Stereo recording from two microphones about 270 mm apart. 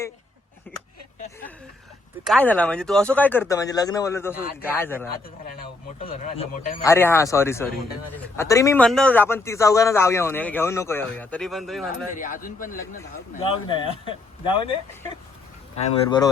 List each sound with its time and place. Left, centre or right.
0.7 s a sound: centre
2.2 s a man's voice: centre
6.1 s speech: left
6.8 s a man's voice: centre
12.1 s speech: left
13.0 s speech: centre
16.0 s a man's voice: centre